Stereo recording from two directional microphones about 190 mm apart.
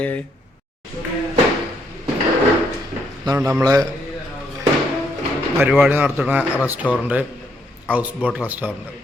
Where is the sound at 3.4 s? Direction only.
15° right (ahead or behind).